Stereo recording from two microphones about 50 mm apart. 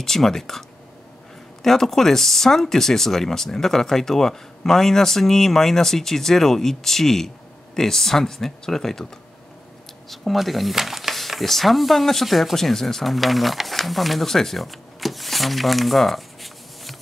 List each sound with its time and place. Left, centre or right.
0.0 s speech: centre
10.0 s speech: centre